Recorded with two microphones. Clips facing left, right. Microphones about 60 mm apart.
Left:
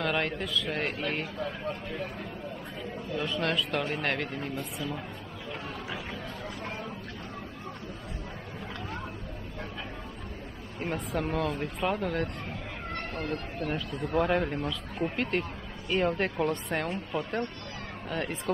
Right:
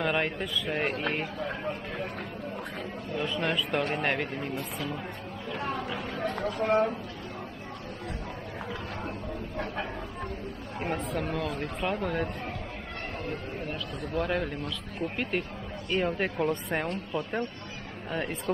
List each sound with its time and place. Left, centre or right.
0.0 s speech: centre
3.2 s speech: centre
6.1 s a sound: right
11.1 s speech: centre
14.1 s speech: centre